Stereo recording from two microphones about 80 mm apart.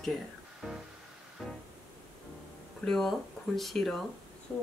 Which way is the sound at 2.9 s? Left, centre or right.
Centre.